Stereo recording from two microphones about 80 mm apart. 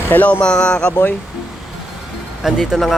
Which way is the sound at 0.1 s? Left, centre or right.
Centre.